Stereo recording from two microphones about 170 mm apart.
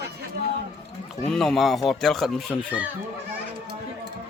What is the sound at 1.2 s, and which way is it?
Speech, centre (ahead or behind).